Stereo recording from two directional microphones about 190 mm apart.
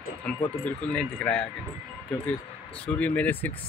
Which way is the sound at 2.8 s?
5° left (ahead or behind).